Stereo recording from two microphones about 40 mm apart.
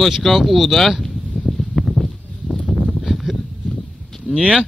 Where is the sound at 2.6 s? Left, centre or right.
Right.